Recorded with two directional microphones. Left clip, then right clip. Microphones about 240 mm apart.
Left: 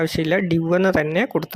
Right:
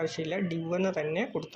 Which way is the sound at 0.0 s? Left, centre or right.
Left.